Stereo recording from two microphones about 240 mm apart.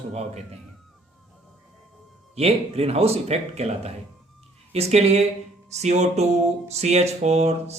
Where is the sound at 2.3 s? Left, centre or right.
Right.